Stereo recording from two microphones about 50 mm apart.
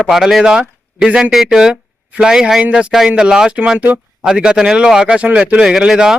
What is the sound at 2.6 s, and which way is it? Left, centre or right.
A man's voice, right.